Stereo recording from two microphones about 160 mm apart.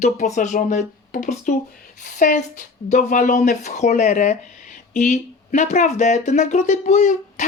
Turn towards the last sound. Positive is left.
turn(degrees=50)  # may be behind; listen again after turning